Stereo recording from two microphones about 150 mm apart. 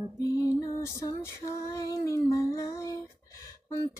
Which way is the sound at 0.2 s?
20° left (ahead or behind).